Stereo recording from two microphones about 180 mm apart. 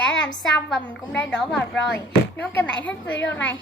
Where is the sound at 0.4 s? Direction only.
5° left (ahead or behind).